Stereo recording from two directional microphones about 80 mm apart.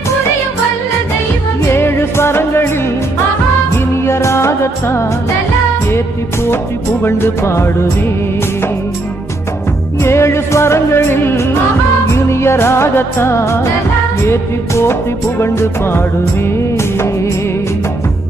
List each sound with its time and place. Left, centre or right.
1.7 s music: left
3.7 s music of bollywood: left
5.9 s music: left
10.0 s music: left